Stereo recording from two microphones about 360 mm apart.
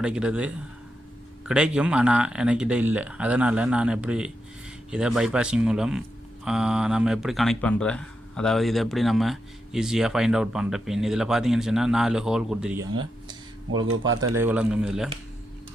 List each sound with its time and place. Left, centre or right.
0.0 s speech: centre
13.9 s speech: right
14.3 s speech: centre